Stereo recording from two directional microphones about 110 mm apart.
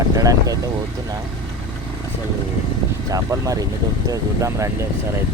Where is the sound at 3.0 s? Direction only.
30° right (ahead or behind).